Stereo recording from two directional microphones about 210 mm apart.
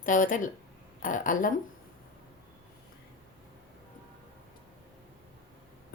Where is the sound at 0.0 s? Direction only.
40° left (ahead or behind).